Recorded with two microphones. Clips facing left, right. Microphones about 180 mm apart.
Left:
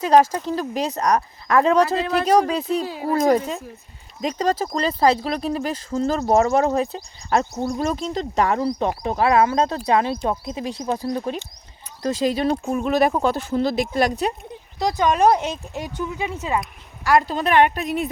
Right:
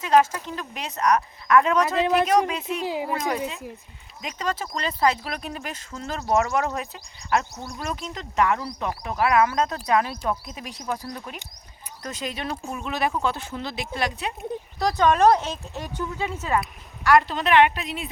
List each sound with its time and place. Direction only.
0.0 s speech: 35° left (ahead or behind)
2.8 s speech: 15° right (ahead or behind)
3.1 s speech: 40° left (ahead or behind)
14.8 s speech: 15° left (ahead or behind)
17.0 s a woman's voice: 30° left (ahead or behind)